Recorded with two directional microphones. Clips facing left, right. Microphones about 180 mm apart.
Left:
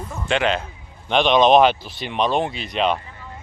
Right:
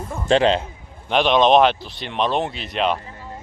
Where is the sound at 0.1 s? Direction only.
30° right (ahead or behind).